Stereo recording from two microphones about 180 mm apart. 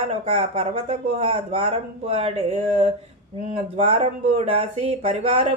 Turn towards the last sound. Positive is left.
turn(degrees=-35)  # may be behind; listen again after turning